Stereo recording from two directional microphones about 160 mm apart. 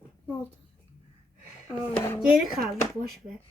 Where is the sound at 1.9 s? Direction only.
15° left (ahead or behind).